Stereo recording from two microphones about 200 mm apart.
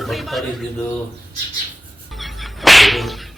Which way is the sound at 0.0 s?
Centre (ahead or behind).